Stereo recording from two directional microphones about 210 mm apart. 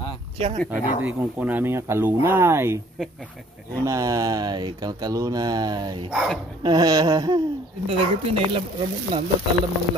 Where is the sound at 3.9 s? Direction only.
15° right (ahead or behind).